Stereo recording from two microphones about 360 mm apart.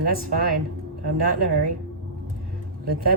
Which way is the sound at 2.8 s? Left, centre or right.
Right.